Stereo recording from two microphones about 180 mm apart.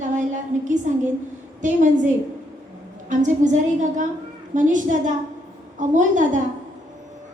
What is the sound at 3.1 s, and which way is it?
A woman's voice, 45° right (ahead or behind).